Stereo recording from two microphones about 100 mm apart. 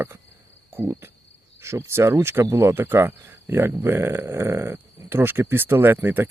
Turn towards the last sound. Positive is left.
turn(degrees=-20)  # may be behind; listen again after turning